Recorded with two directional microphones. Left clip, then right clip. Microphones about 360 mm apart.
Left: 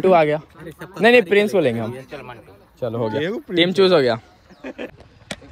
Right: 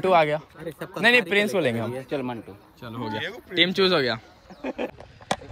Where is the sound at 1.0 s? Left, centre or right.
Centre.